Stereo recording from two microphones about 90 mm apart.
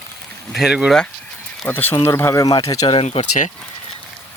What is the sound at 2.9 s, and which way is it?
Speech, 90° left.